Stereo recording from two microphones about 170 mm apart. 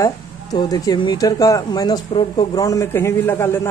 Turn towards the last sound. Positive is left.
turn(degrees=15)  # may be behind; listen again after turning